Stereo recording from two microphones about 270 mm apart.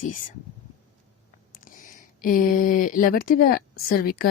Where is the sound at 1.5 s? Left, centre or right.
Left.